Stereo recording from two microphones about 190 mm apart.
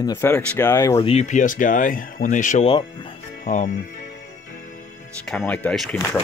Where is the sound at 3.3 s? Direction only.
40° left (ahead or behind).